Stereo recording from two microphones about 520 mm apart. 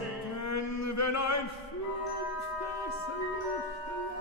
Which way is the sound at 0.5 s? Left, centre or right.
Left.